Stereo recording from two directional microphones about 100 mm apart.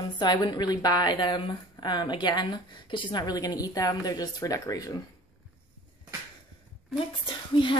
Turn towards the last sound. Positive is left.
turn(degrees=55)  # may be behind; listen again after turning